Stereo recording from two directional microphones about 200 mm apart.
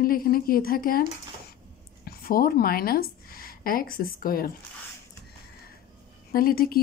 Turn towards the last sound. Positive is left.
turn(degrees=50)  # may be behind; listen again after turning